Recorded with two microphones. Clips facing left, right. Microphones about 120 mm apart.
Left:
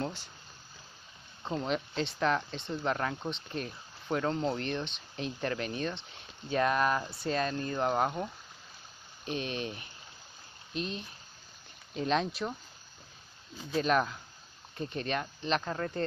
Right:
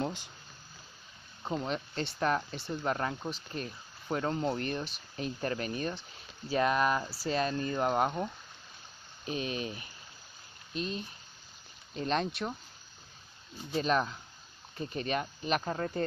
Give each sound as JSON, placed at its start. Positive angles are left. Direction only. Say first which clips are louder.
{"t": 0.0, "sound": "a sound", "louder": "right 1 dB", "side_deg": -15}
{"t": 1.4, "sound": "speech", "louder": "left 1 dB", "side_deg": -5}
{"t": 4.2, "sound": "speech", "louder": "even", "side_deg": -5}
{"t": 13.7, "sound": "speech", "louder": "left 1 dB", "side_deg": 0}